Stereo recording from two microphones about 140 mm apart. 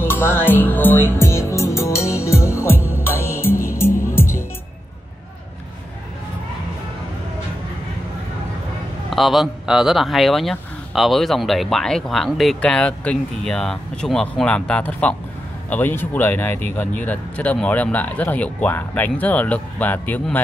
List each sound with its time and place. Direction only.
0.0 s music: 15° left (ahead or behind)
9.1 s speech: centre (ahead or behind)